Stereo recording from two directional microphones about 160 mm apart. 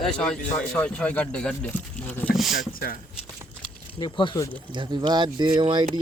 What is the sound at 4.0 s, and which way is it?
Speech, 30° left (ahead or behind).